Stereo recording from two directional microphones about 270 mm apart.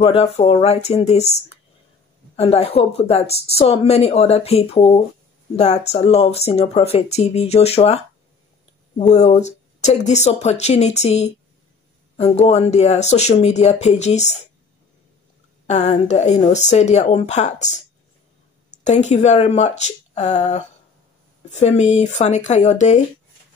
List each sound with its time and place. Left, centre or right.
0.0 s speech: left
15.6 s speech: left
18.9 s speech: left